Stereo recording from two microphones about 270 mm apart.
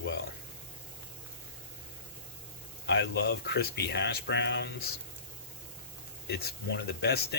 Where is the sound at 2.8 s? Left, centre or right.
Left.